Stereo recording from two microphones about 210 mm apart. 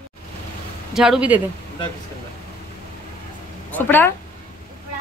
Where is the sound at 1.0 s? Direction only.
5° right (ahead or behind).